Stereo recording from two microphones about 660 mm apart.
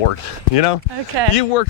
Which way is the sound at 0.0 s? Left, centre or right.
Left.